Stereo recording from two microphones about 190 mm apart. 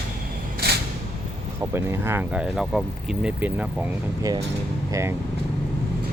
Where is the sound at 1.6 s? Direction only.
10° right (ahead or behind).